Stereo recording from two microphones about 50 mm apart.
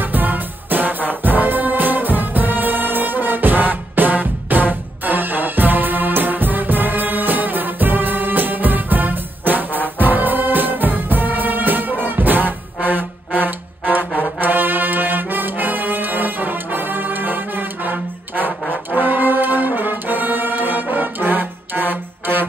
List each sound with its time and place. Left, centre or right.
0.0 s music: right
14.4 s brass instrument: right